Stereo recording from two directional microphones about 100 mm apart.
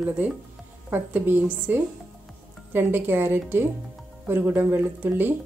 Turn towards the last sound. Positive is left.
turn(degrees=-20)  # may be behind; listen again after turning